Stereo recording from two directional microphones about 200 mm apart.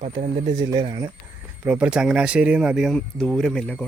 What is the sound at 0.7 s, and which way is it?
Speech, 20° right (ahead or behind).